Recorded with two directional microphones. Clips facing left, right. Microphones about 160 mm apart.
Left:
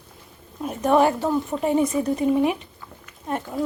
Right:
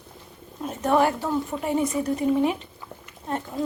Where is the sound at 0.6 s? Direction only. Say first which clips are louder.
Left 3 dB; 15° left (ahead or behind).